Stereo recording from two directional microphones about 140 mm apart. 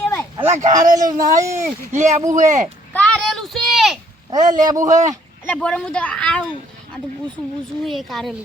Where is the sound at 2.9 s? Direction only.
10° left (ahead or behind).